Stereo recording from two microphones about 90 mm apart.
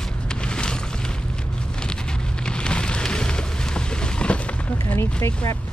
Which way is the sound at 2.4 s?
10° left (ahead or behind).